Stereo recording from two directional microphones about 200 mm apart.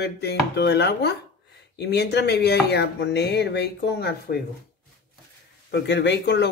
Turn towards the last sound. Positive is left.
turn(degrees=60)  # may be behind; listen again after turning